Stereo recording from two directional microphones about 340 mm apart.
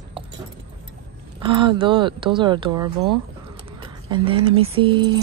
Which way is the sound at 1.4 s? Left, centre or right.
Centre.